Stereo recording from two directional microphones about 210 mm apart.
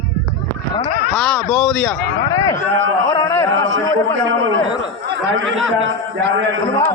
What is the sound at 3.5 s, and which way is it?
A man's voice, 65° right (ahead or behind).